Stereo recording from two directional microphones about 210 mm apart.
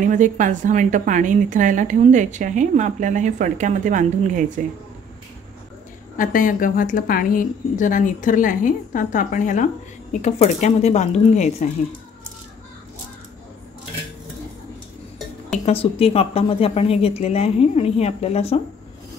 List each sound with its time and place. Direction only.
0.0 s a woman's voice: 35° right (ahead or behind)
6.1 s a woman's voice: 40° left (ahead or behind)
15.6 s a woman's voice: 25° left (ahead or behind)